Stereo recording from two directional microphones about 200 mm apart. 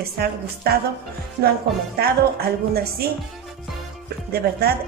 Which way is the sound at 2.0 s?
50° right (ahead or behind).